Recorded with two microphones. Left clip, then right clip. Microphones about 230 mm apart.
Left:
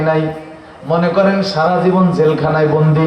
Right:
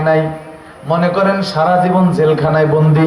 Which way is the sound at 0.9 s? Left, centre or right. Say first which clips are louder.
Even; right.